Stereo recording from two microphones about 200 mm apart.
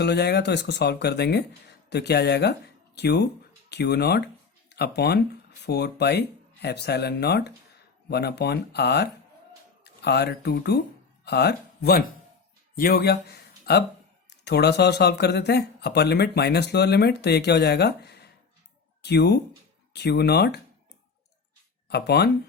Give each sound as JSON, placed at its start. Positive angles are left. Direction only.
{"t": 0.0, "sound": "speech", "side_deg": 55}
{"t": 21.8, "sound": "speech", "side_deg": 55}